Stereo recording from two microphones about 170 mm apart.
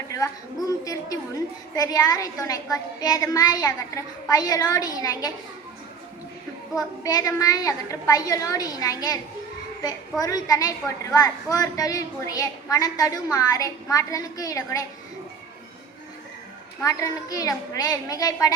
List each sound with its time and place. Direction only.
0.1 s a woman's voice: 20° left (ahead or behind)
6.7 s a woman's voice: 20° left (ahead or behind)
16.8 s a woman's voice: 20° left (ahead or behind)